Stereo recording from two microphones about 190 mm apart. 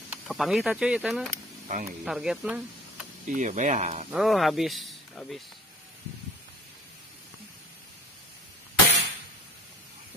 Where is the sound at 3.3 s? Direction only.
40° right (ahead or behind).